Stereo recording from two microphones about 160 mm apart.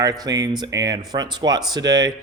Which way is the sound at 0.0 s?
25° right (ahead or behind).